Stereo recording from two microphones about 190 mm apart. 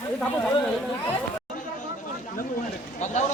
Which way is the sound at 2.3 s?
45° left (ahead or behind).